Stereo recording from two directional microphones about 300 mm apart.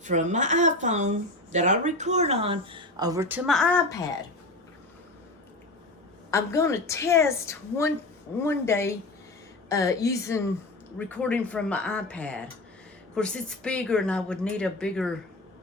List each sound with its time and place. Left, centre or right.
0.0 s speech: right; by 3.9 s centre
6.3 s a woman's voice: centre